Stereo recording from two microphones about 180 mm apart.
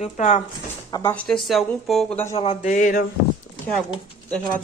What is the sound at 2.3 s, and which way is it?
Speech, 40° left (ahead or behind).